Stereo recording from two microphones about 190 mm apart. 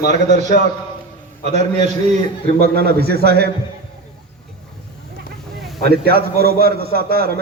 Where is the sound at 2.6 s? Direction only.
55° right (ahead or behind).